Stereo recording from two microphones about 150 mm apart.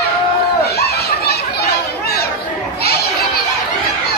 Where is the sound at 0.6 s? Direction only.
90° left.